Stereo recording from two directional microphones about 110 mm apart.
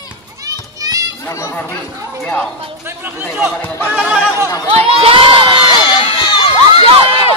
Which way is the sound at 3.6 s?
20° left (ahead or behind).